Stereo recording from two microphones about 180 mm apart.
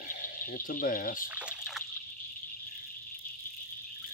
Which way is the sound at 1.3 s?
5° right (ahead or behind).